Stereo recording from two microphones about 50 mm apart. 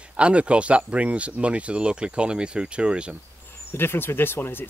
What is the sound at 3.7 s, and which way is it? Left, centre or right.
Speech, left.